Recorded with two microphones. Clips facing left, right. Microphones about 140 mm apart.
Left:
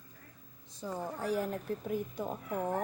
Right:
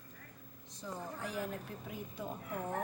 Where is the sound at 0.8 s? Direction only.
35° left (ahead or behind).